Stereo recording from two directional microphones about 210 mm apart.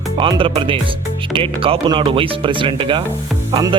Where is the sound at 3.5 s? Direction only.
25° right (ahead or behind).